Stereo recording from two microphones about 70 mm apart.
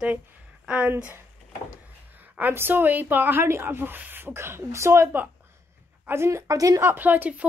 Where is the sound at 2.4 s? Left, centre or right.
Right.